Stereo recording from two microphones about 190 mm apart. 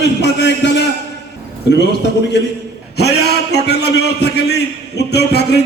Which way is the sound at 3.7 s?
60° left (ahead or behind).